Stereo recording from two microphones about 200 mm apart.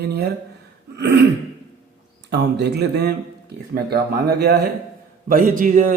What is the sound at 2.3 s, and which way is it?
Speech, 55° right (ahead or behind).